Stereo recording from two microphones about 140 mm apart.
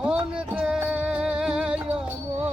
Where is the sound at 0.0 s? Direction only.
10° right (ahead or behind).